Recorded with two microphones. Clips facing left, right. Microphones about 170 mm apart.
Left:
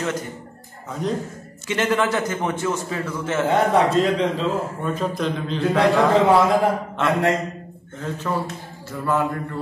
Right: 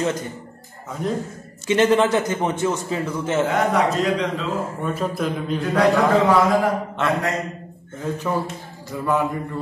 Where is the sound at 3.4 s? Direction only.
30° left (ahead or behind).